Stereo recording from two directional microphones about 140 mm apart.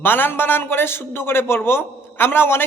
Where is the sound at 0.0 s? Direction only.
15° left (ahead or behind).